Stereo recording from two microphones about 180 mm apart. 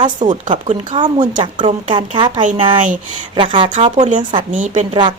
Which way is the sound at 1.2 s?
45° right (ahead or behind).